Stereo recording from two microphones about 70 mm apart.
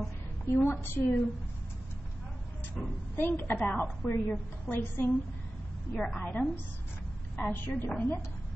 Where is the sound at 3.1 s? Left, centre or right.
Left.